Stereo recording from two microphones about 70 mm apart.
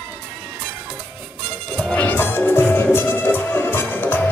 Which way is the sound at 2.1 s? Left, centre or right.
Left.